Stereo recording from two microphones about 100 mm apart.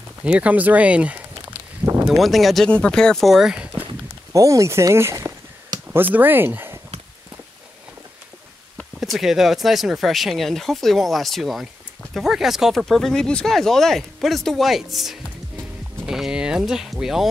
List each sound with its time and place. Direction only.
0.2 s speech: 15° right (ahead or behind)
2.0 s speech: centre (ahead or behind)
4.3 s speech: 35° right (ahead or behind)
5.9 s speech: 20° right (ahead or behind)
9.0 s speech: centre (ahead or behind)